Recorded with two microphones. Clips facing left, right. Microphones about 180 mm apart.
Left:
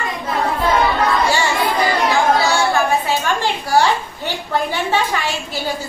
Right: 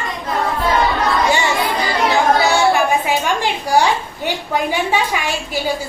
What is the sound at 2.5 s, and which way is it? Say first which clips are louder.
Music: right 2 dB; 15° right (ahead or behind).